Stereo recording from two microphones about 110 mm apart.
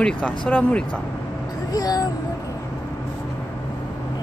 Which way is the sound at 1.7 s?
35° left (ahead or behind).